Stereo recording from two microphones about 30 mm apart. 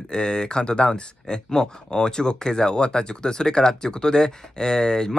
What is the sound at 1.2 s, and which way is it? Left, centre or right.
Speech, centre.